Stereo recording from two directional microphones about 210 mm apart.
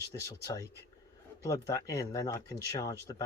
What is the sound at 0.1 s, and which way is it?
Speech, 15° left (ahead or behind).